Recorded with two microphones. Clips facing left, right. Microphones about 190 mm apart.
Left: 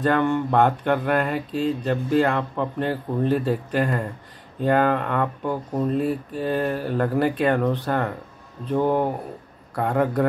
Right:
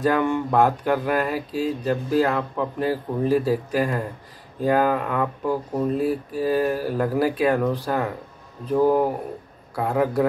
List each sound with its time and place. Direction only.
0.0 s speech: 10° right (ahead or behind)